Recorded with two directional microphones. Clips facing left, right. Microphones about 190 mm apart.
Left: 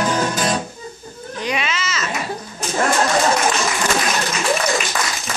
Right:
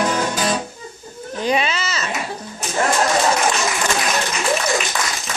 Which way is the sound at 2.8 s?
Centre (ahead or behind).